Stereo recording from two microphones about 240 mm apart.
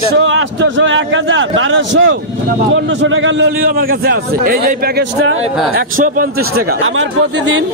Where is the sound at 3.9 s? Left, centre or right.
Right.